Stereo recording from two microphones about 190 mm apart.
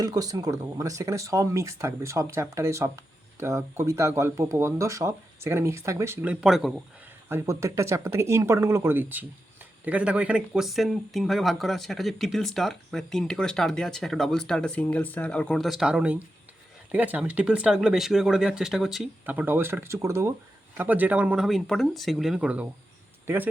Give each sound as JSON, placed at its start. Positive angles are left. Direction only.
{"t": 0.0, "sound": "speech", "side_deg": -20}
{"t": 7.3, "sound": "speech", "side_deg": -15}